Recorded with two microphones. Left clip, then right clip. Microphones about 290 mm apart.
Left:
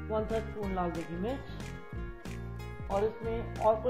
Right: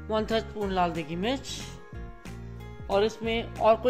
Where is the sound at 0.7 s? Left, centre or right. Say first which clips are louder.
Right 8 dB; right.